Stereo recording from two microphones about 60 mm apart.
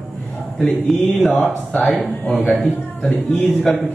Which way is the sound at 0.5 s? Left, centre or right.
Centre.